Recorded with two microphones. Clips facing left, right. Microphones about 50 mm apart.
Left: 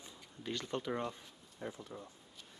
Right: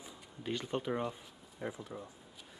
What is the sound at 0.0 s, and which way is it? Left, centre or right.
Speech, centre.